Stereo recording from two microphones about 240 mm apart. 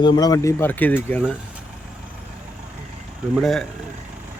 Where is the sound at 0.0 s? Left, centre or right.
Centre.